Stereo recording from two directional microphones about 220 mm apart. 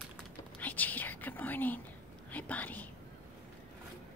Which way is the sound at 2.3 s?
5° left (ahead or behind).